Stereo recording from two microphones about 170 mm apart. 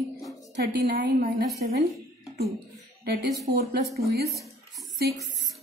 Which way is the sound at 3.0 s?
70° right (ahead or behind).